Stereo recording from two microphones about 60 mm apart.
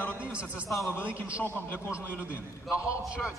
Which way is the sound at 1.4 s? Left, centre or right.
Left.